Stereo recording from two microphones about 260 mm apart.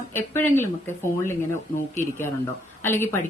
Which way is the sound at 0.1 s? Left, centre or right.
Centre.